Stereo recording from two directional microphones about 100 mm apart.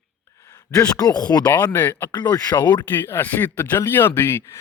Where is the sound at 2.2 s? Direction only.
40° left (ahead or behind).